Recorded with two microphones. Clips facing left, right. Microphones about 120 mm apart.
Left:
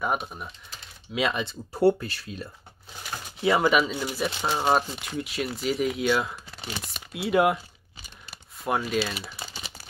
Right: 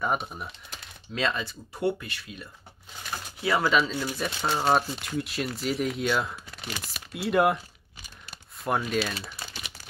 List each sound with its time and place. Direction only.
0.0 s speech: centre (ahead or behind)
1.1 s speech: 10° left (ahead or behind)
1.4 s speech: 30° left (ahead or behind)
3.4 s speech: 20° left (ahead or behind); by 7.6 s centre (ahead or behind)
8.3 s typing: centre (ahead or behind)